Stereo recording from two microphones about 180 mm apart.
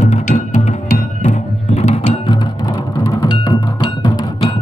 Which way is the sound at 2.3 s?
20° left (ahead or behind).